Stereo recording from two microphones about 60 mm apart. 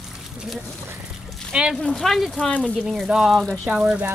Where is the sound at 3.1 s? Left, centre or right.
Centre.